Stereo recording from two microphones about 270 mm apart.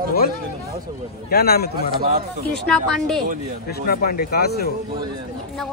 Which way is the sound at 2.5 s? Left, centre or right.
Centre.